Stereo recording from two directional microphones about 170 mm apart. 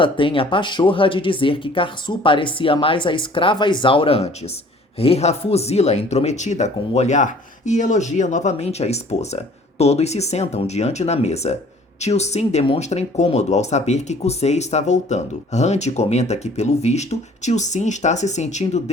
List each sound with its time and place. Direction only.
0.0 s speech: 30° left (ahead or behind)